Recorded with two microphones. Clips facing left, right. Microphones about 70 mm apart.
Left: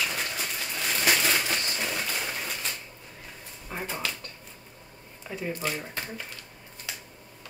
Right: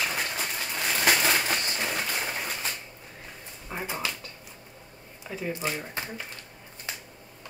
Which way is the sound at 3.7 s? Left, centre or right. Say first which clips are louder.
Right 1 dB; centre.